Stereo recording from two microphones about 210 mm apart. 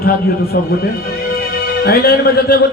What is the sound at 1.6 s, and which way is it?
Speech, 50° left (ahead or behind).